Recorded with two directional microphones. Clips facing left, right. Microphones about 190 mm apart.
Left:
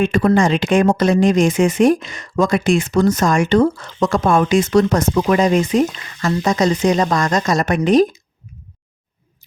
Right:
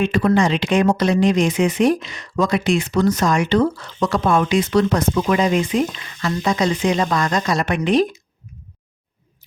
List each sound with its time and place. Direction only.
0.0 s speech: 45° left (ahead or behind)